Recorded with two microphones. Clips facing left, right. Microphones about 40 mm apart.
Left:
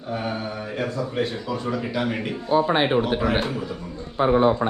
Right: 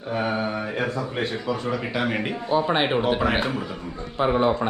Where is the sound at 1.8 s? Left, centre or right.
Right.